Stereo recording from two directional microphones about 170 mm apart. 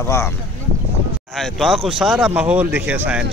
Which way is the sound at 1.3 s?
Centre (ahead or behind).